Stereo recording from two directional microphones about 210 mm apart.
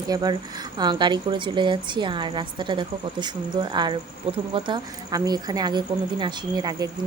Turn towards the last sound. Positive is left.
turn(degrees=-20)  # may be behind; listen again after turning